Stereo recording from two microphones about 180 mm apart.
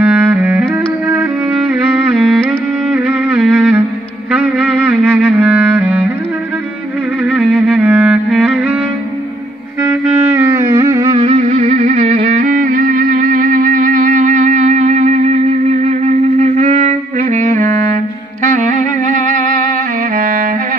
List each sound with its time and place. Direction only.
0.0 s music: 10° right (ahead or behind)
2.1 s music: 5° right (ahead or behind)
5.0 s clarinet: 10° right (ahead or behind)
7.2 s music: 5° right (ahead or behind)
9.8 s music: 15° right (ahead or behind)
11.1 s music: 35° right (ahead or behind)
12.2 s music: 50° right (ahead or behind)